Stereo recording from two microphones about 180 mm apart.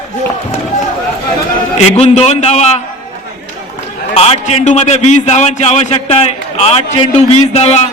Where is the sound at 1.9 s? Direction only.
35° left (ahead or behind).